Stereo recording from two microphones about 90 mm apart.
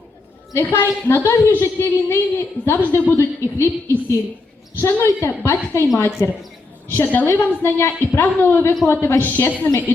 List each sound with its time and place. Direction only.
0.5 s a woman's voice: 30° left (ahead or behind)
4.8 s a woman's voice: 30° left (ahead or behind); by 9.7 s 15° left (ahead or behind)